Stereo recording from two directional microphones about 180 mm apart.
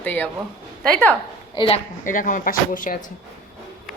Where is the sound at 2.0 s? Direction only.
45° left (ahead or behind).